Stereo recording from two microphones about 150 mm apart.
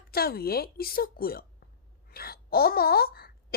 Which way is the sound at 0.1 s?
90° left.